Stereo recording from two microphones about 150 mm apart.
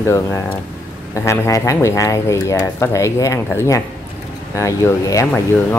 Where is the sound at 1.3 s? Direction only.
20° left (ahead or behind).